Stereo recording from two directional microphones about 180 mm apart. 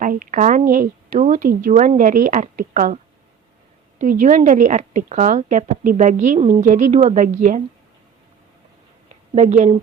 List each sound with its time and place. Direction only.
0.0 s speech: 45° right (ahead or behind)
9.3 s speech: 40° right (ahead or behind)